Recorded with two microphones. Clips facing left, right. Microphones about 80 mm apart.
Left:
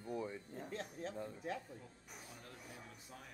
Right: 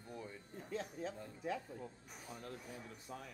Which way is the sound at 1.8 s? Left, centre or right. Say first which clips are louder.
Right 5 dB; right.